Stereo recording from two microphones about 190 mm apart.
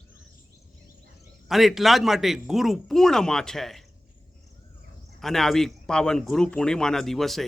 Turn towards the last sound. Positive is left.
turn(degrees=0)  # may be behind; listen again after turning